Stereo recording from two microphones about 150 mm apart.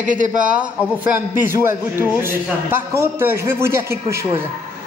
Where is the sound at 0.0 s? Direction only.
60° right (ahead or behind).